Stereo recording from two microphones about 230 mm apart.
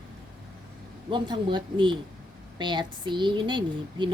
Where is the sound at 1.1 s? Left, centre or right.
Centre.